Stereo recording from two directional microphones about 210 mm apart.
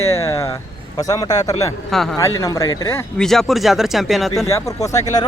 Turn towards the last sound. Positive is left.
turn(degrees=15)  # may be behind; listen again after turning